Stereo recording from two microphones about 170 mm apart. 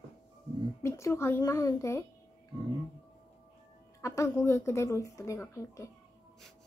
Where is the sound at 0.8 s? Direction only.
15° left (ahead or behind).